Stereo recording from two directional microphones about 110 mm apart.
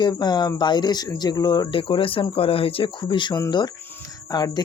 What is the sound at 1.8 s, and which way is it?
Speech, 55° left (ahead or behind).